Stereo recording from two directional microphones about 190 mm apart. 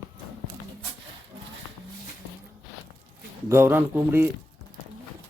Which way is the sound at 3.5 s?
10° right (ahead or behind).